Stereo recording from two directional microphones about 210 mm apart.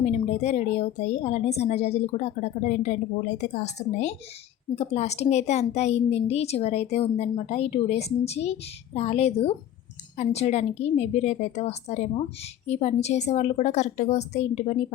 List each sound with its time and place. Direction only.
0.0 s a woman's voice: 30° left (ahead or behind)